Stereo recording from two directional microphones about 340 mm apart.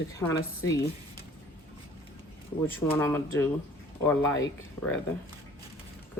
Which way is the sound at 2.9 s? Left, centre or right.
Centre.